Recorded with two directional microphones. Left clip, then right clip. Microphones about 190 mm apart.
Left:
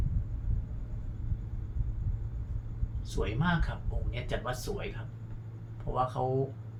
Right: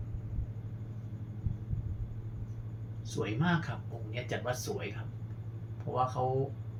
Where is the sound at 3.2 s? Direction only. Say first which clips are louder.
Left 1 dB; 30° left (ahead or behind).